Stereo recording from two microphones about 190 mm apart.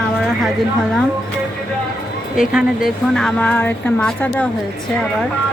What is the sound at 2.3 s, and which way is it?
Speech, 5° right (ahead or behind).